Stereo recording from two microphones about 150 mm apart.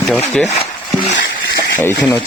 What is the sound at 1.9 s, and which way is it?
Speech, 25° left (ahead or behind).